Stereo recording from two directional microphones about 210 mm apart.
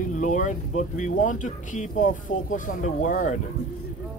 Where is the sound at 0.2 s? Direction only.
35° left (ahead or behind).